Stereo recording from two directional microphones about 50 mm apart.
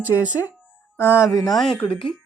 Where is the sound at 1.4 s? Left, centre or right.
Centre.